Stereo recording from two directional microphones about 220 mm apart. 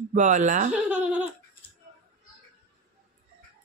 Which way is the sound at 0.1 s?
35° right (ahead or behind).